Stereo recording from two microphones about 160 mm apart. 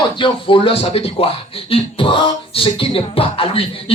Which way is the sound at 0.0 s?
30° left (ahead or behind).